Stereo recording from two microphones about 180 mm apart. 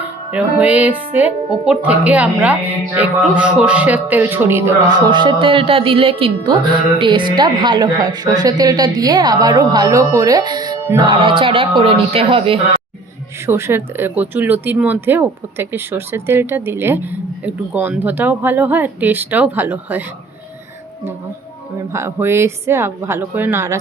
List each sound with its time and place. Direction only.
0.3 s speech: 10° right (ahead or behind); by 12.5 s 30° right (ahead or behind)
13.5 s speech: 15° right (ahead or behind)
21.9 s speech: 15° right (ahead or behind)